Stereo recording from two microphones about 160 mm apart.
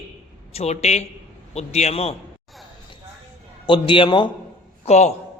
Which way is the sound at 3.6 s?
30° left (ahead or behind).